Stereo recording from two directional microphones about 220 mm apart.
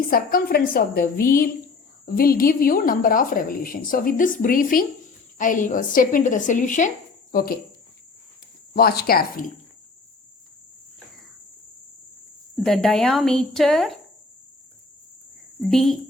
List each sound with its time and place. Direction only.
0.1 s a woman's voice: 40° left (ahead or behind)
8.7 s speech: 45° left (ahead or behind)
12.5 s speech: centre (ahead or behind)
15.7 s speech: centre (ahead or behind)